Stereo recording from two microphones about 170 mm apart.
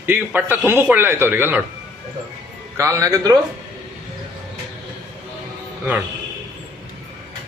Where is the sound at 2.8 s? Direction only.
15° right (ahead or behind).